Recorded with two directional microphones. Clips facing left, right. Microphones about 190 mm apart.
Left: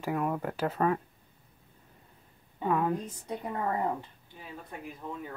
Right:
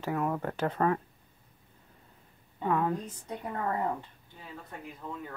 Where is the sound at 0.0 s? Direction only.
15° left (ahead or behind).